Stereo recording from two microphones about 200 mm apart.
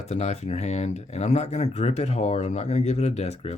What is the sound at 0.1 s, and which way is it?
Speech, 35° left (ahead or behind).